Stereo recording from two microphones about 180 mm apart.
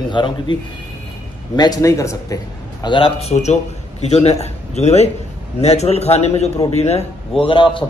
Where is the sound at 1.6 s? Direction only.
20° left (ahead or behind).